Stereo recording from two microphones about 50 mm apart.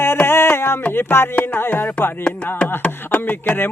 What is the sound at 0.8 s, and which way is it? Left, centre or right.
Speech, left.